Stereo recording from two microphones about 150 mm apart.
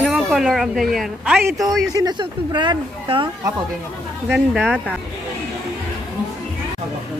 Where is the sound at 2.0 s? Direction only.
30° right (ahead or behind).